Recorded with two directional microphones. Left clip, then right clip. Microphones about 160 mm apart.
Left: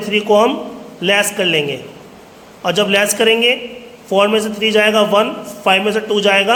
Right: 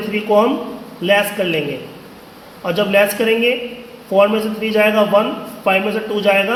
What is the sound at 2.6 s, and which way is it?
A man's voice, 45° left (ahead or behind).